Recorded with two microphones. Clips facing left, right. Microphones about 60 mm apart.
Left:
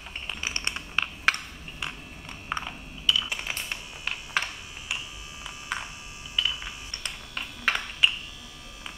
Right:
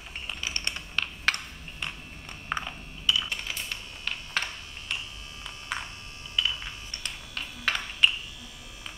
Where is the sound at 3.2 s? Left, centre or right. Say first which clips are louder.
Left 1 dB; centre.